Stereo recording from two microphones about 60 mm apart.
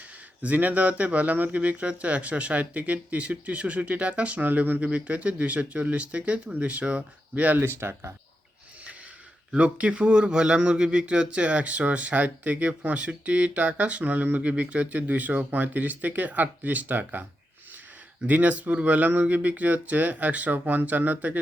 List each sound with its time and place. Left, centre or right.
0.4 s speech: right
9.5 s speech: right
18.3 s speech: right